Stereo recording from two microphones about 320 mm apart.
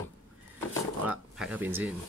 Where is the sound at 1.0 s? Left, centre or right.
Centre.